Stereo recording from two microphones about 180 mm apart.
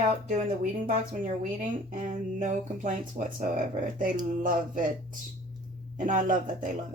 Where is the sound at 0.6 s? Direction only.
50° right (ahead or behind).